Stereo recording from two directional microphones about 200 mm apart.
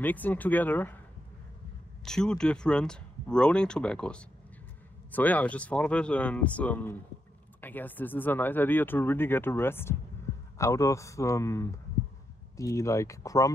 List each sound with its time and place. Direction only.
0.0 s speech: 10° left (ahead or behind)
2.0 s speech: 5° left (ahead or behind)
10.3 s a sound: 15° left (ahead or behind)
10.6 s speech: 15° left (ahead or behind)